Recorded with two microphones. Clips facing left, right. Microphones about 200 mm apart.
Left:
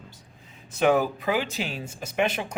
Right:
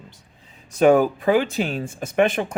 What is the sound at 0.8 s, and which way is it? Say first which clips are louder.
Speech: right 6 dB; 45° right (ahead or behind).